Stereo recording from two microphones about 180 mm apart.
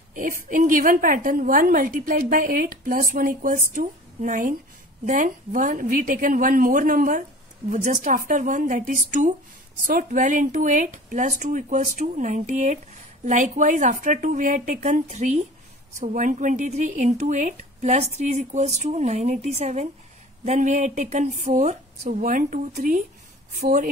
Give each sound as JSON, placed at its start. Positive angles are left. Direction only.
{"t": 0.1, "sound": "speech", "side_deg": -45}